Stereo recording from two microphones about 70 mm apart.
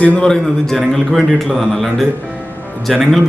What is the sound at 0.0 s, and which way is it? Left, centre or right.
Speech, centre.